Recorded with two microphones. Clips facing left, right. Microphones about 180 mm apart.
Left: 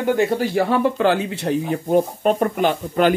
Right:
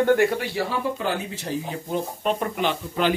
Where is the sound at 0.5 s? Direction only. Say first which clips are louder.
Left 8 dB; 65° left (ahead or behind).